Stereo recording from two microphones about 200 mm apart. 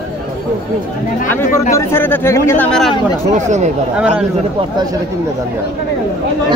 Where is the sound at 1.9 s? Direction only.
10° left (ahead or behind).